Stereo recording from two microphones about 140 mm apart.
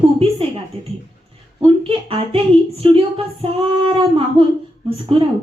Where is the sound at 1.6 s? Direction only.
40° right (ahead or behind).